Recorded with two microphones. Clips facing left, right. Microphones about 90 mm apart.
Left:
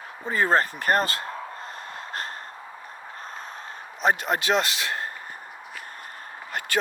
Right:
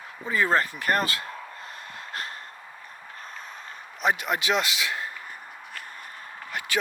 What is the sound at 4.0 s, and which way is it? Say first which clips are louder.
A man's voice: left 2 dB; 35° left (ahead or behind).